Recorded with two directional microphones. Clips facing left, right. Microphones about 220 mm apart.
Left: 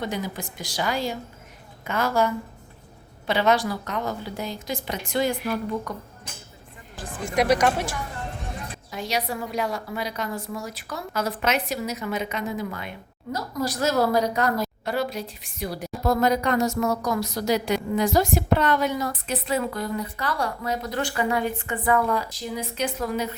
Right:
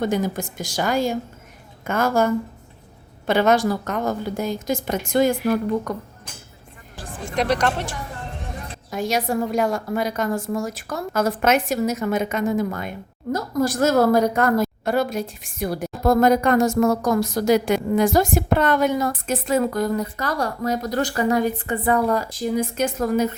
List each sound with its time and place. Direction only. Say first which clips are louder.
0.0 s a woman's voice: right 7 dB; 45° right (ahead or behind)
7.0 s speech: left 1 dB; 10° left (ahead or behind)
8.9 s a woman's voice: right 6 dB; 50° right (ahead or behind)